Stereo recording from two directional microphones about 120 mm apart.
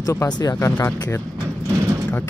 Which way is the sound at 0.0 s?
25° left (ahead or behind).